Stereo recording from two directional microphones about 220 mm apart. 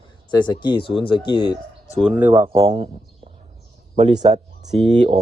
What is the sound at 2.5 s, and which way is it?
Speech, 25° right (ahead or behind).